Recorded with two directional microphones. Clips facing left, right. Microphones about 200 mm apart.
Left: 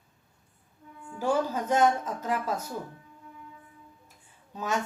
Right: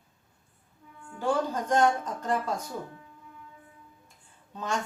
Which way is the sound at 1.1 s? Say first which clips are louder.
Left 1 dB; 5° left (ahead or behind).